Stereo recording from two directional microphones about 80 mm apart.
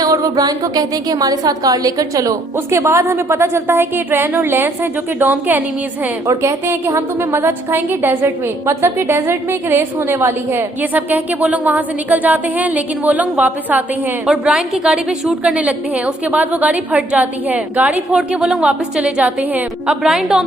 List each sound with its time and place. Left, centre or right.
0.0 s a woman's voice: right
6.2 s a woman's voice: right; by 20.4 s centre